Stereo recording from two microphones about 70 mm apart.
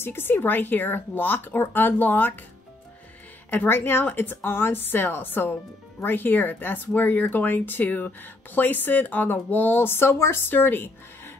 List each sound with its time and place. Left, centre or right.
0.0 s speech: left
3.4 s a woman's voice: left